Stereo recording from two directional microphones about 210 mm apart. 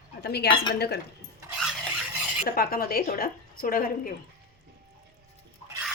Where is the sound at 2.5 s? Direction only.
45° left (ahead or behind).